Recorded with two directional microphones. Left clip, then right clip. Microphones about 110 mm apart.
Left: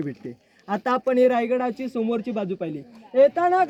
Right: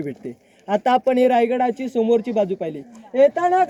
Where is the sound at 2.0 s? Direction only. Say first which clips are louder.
Right 9 dB; 25° left (ahead or behind).